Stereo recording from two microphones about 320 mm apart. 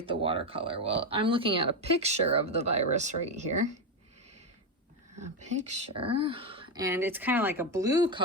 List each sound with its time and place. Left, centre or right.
0.0 s speech: centre
5.1 s speech: right